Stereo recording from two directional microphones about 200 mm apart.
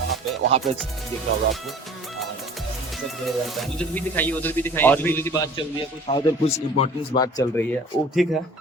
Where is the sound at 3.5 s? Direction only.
Centre (ahead or behind).